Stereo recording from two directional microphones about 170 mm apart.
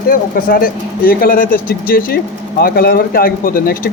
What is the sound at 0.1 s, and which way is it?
Speech, 60° left (ahead or behind).